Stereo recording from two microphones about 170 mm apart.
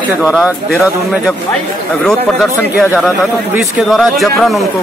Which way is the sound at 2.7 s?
10° right (ahead or behind).